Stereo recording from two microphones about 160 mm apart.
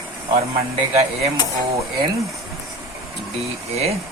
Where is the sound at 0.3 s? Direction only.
40° right (ahead or behind).